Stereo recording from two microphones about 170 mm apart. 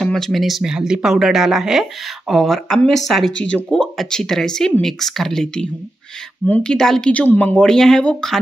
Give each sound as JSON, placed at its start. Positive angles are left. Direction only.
{"t": 0.0, "sound": "speech", "side_deg": 0}